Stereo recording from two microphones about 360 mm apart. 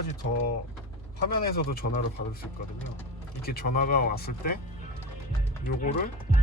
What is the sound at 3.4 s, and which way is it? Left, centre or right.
Speech, left.